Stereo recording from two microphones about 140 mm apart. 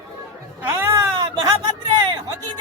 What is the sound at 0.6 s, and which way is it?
Music, 20° right (ahead or behind).